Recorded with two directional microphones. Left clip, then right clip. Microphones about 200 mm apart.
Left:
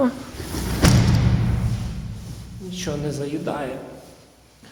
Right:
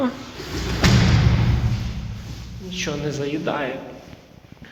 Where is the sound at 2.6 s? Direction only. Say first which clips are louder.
Right 2 dB; 20° left (ahead or behind); by 3.8 s 5° left (ahead or behind).